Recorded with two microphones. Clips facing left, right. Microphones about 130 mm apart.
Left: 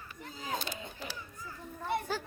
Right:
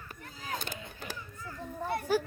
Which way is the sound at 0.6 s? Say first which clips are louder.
Left 1 dB; 50° right (ahead or behind).